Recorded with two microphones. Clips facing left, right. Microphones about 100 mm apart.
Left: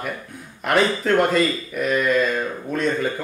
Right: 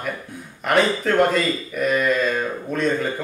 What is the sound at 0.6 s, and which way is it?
Speech, centre (ahead or behind).